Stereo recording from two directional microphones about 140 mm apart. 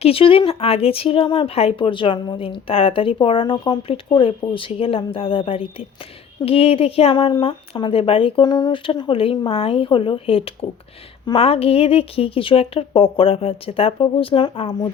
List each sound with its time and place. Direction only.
0.0 s speech: 40° left (ahead or behind)